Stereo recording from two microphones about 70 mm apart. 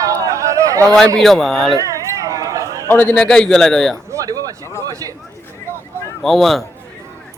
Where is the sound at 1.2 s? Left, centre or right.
Centre.